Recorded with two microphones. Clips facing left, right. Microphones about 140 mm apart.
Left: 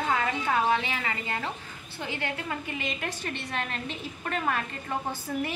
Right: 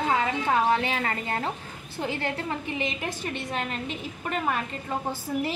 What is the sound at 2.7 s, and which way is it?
A woman's voice, 20° right (ahead or behind).